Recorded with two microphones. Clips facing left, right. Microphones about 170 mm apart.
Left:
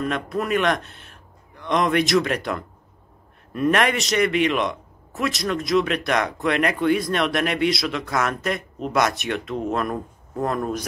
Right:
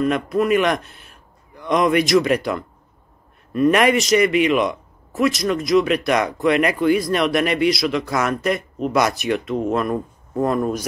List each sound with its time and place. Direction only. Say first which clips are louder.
0.0 s a man's voice: right 6 dB; 5° right (ahead or behind)